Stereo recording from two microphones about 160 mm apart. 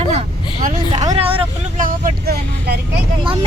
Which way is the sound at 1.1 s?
35° right (ahead or behind).